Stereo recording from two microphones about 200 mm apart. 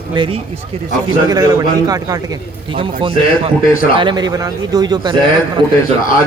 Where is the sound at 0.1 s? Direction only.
25° right (ahead or behind).